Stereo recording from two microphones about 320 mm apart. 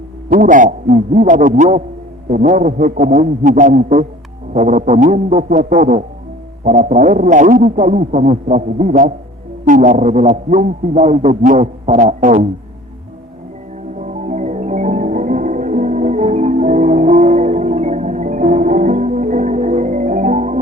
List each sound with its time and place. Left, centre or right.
0.3 s a man's voice: right
14.0 s music: right